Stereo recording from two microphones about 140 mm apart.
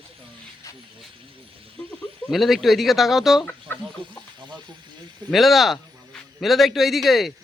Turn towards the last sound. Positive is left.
turn(degrees=0)  # may be behind; listen again after turning